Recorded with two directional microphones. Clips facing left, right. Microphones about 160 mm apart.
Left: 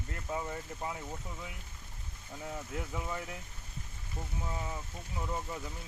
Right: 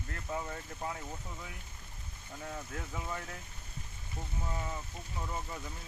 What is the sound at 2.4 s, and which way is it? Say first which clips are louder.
Speech: left 2 dB; 15° left (ahead or behind).